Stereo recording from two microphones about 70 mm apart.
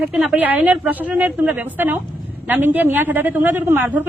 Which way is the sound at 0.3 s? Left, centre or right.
Right.